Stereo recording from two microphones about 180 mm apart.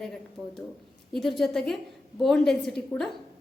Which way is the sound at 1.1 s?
Centre (ahead or behind).